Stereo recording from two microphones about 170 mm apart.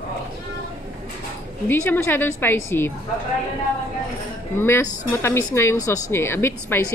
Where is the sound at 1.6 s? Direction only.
15° left (ahead or behind).